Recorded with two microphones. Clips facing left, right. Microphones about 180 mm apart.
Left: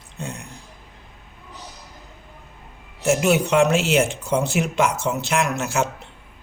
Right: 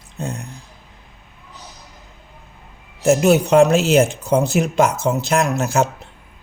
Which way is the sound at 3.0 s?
40° right (ahead or behind).